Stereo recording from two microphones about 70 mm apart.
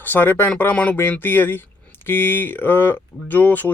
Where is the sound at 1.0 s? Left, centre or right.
Left.